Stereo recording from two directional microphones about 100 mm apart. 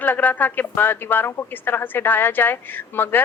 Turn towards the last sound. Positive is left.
turn(degrees=20)  # may be behind; listen again after turning